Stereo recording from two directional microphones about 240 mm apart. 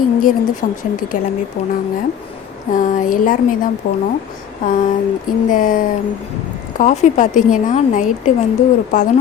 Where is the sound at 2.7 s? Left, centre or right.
Left.